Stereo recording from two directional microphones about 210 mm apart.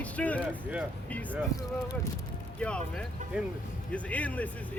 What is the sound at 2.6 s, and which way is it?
Speech, 5° left (ahead or behind).